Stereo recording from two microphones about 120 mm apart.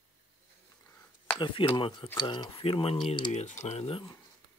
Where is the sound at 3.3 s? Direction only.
70° left (ahead or behind).